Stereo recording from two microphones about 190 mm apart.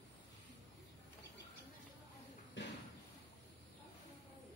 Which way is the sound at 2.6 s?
75° left (ahead or behind).